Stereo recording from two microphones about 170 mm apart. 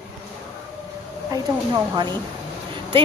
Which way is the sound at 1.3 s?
20° right (ahead or behind).